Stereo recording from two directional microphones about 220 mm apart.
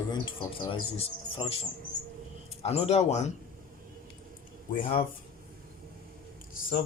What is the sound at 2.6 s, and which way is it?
Speech, 30° left (ahead or behind).